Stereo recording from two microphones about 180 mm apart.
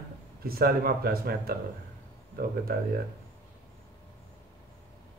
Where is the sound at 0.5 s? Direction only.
55° right (ahead or behind).